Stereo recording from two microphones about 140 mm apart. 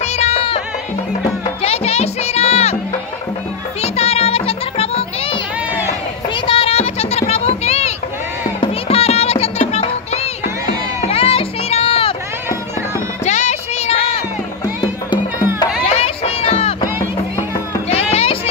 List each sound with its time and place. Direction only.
0.0 s music: 50° left (ahead or behind)
1.6 s music: 45° left (ahead or behind)
3.8 s music: 45° left (ahead or behind)
6.4 s a sound: 40° left (ahead or behind)
8.5 s music: 45° left (ahead or behind)
13.2 s music: 55° left (ahead or behind)
15.8 s music: 45° left (ahead or behind)
18.1 s a sound: 40° left (ahead or behind)